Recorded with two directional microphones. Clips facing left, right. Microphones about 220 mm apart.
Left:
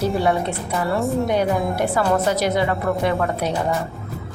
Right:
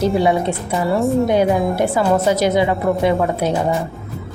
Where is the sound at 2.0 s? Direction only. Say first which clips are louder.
Right 4 dB; 15° right (ahead or behind).